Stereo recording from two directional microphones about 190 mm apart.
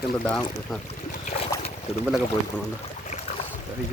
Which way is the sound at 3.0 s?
40° left (ahead or behind).